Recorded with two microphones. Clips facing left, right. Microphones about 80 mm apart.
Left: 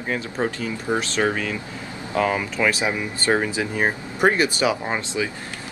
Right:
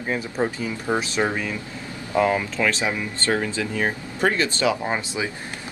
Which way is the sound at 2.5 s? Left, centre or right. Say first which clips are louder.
Left 1 dB; centre.